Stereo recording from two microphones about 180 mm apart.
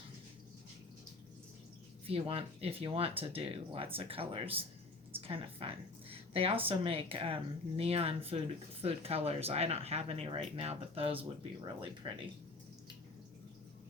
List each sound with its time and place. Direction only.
2.0 s a woman's voice: 30° right (ahead or behind)